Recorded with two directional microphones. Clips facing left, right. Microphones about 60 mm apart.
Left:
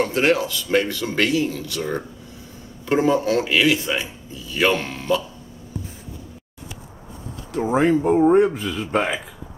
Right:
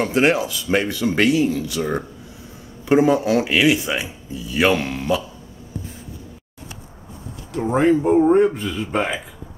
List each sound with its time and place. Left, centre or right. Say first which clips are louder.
0.1 s speech: right 1 dB; centre
7.5 s speech: right 1 dB; centre